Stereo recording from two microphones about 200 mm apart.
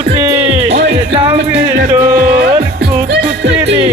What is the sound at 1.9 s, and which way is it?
Music, 10° right (ahead or behind).